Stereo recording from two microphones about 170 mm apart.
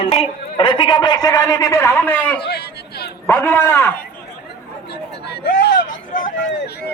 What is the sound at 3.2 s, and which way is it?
Speech, 10° left (ahead or behind).